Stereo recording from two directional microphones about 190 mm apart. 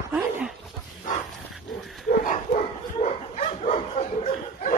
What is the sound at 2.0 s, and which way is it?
Dog, 40° left (ahead or behind).